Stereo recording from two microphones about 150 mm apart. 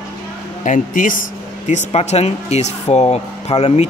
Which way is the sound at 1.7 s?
45° left (ahead or behind).